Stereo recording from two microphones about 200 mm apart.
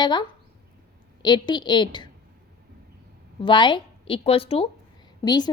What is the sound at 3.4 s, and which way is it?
A woman's voice, 25° left (ahead or behind).